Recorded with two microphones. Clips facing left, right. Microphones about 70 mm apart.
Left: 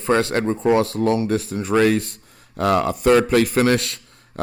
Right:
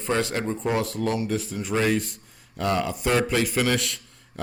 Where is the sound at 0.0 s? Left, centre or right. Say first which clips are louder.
Left 6 dB; left.